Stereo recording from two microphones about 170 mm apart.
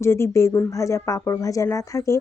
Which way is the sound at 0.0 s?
15° left (ahead or behind).